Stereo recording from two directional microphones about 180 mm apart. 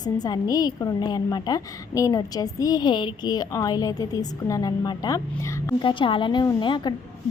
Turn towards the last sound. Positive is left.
turn(degrees=25)  # may be behind; listen again after turning